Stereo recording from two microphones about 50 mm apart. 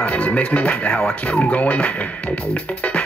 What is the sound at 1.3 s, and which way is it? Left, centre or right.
Speech, left.